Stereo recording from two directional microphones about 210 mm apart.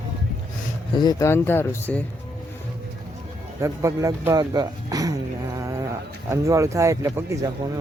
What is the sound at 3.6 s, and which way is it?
Speech, 15° right (ahead or behind).